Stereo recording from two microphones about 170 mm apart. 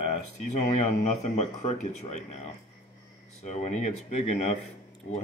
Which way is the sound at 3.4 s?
45° left (ahead or behind).